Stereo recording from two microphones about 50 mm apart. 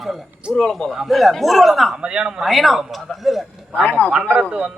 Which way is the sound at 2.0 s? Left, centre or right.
Centre.